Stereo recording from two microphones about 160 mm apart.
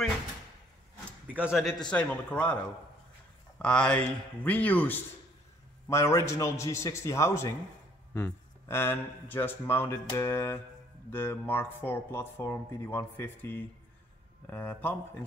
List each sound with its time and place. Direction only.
1.2 s a man's voice: 10° right (ahead or behind); by 2.5 s 10° left (ahead or behind)
3.5 s speech: 5° left (ahead or behind)